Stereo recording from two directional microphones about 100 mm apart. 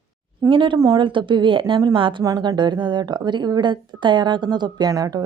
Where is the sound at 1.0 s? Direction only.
55° right (ahead or behind).